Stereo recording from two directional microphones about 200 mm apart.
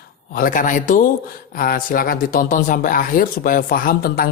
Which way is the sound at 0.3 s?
40° left (ahead or behind).